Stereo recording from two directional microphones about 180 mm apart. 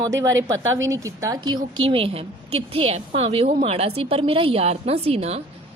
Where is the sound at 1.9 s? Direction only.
30° right (ahead or behind).